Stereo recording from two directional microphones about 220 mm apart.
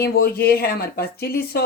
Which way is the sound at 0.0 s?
45° left (ahead or behind).